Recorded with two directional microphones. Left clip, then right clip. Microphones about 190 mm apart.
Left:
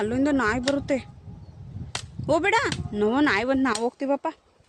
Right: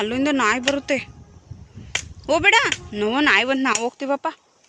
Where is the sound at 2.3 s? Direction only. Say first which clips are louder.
Right 6 dB; 15° left (ahead or behind).